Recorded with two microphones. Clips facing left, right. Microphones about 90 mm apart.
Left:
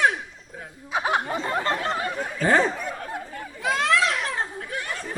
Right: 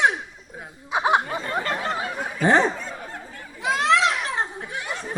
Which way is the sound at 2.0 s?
10° right (ahead or behind).